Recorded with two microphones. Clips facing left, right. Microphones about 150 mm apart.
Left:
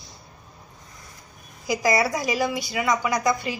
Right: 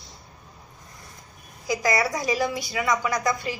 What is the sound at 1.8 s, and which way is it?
Speech, 25° left (ahead or behind).